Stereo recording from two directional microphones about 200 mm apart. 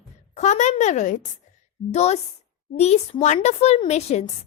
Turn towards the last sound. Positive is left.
turn(degrees=30)  # may be behind; listen again after turning